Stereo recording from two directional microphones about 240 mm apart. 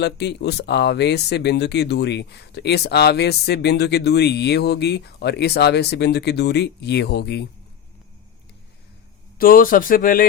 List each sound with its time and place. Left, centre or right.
0.0 s speech: left
9.4 s speech: left